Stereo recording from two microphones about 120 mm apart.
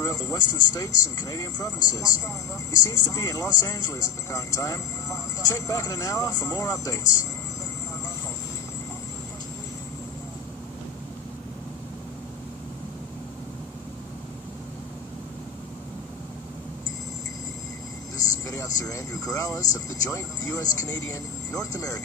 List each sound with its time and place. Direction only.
0.0 s speech: 25° left (ahead or behind)
18.4 s speech: 30° left (ahead or behind)